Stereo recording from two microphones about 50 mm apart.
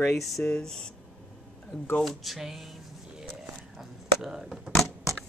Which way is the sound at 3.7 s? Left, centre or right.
Centre.